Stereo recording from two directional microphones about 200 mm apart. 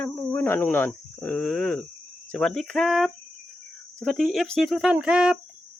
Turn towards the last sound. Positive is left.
turn(degrees=-5)  # may be behind; listen again after turning